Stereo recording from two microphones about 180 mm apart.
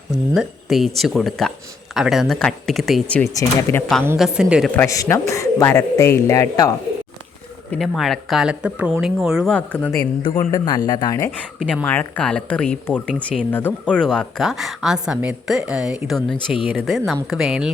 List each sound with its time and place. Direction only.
0.1 s a man's voice: centre (ahead or behind)
4.2 s speech: 5° right (ahead or behind)
4.7 s a man's voice: 15° left (ahead or behind)
7.7 s speech: centre (ahead or behind)
10.7 s speech: 25° left (ahead or behind)
11.6 s speech: 5° left (ahead or behind)